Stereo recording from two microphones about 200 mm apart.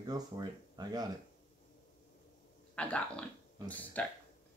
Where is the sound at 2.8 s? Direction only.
5° left (ahead or behind).